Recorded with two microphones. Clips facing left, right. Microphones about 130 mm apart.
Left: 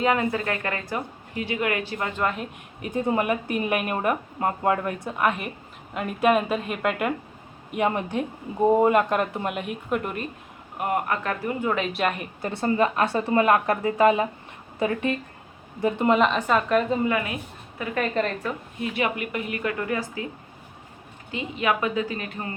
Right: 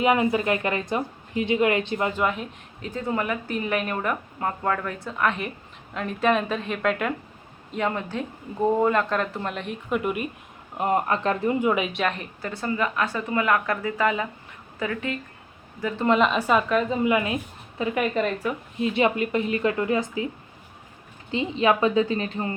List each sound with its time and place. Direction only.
0.0 s speech: 15° right (ahead or behind)
2.1 s speech: centre (ahead or behind)
2.8 s speech: 15° left (ahead or behind); by 10.2 s 5° right (ahead or behind)
10.8 s speech: 25° right (ahead or behind)
11.6 s speech: 10° right (ahead or behind)
11.9 s speech: 5° left (ahead or behind)
12.4 s a woman's voice: 25° left (ahead or behind)
16.0 s speech: centre (ahead or behind)
17.1 s speech: 20° right (ahead or behind)
17.9 s speech: 10° right (ahead or behind)
18.8 s speech: 25° right (ahead or behind)
21.2 s speech: 25° right (ahead or behind)